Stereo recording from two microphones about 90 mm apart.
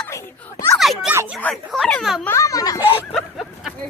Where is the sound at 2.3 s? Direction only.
40° left (ahead or behind).